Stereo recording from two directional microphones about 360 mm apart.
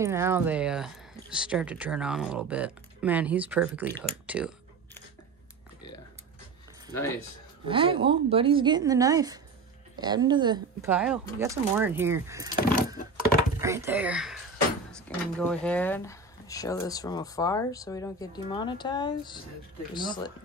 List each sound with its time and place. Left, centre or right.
0.0 s speech: centre
3.9 s clicking: centre
7.6 s speech: centre
12.5 s keys jangling: left
13.6 s speech: centre